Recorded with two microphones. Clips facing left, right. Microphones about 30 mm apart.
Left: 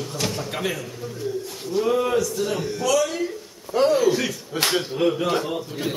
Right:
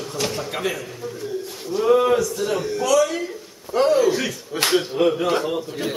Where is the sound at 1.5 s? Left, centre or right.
Centre.